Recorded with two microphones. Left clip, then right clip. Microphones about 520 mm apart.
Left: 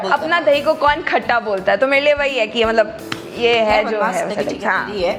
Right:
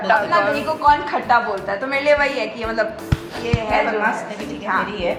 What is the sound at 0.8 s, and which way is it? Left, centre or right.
A woman's voice, left.